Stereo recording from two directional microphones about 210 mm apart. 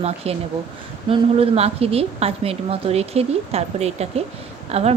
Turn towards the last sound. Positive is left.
turn(degrees=-30)  # may be behind; listen again after turning